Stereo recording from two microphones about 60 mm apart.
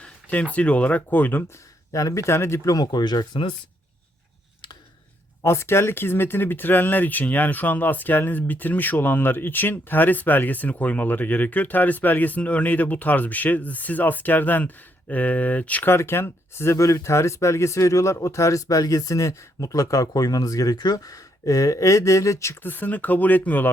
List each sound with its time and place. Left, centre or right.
0.0 s a sound: left
0.5 s speech: left
1.9 s speech: left
5.4 s speech: left
15.9 s speech: left
16.7 s speech: left
22.6 s speech: left